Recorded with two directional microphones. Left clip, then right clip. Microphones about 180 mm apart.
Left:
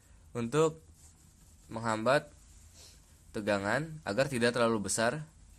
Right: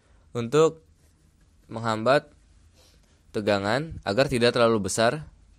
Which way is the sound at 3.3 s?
35° right (ahead or behind).